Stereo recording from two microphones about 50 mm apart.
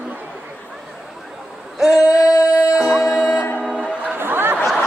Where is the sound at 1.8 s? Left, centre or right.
Centre.